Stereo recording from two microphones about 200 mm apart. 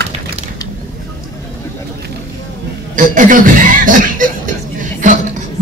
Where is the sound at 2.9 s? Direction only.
40° right (ahead or behind).